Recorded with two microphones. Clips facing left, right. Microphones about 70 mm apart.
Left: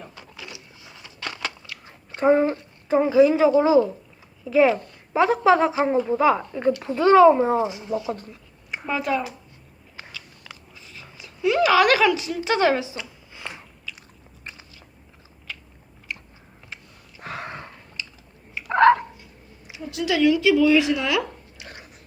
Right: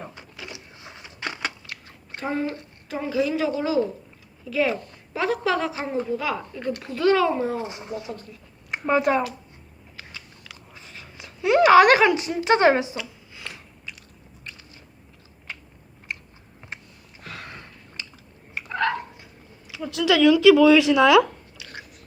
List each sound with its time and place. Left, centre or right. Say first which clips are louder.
0.9 s a sound: right 2 dB; centre
2.1 s a woman's voice: left 9 dB; left
7.7 s speech: left 4 dB; right
7.9 s speech: left 7 dB; left
9.1 s speech: right 1 dB; right
10.8 s speech: right 1 dB; right
17.2 s a sound: left 6 dB; left
18.7 s a sound: left 10 dB; left
20.3 s speech: right 5 dB; right